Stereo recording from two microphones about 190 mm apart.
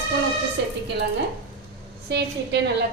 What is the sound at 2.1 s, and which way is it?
Speech, 65° right (ahead or behind).